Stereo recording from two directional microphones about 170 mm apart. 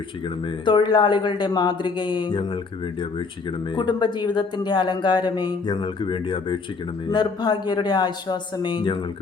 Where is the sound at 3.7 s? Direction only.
25° left (ahead or behind).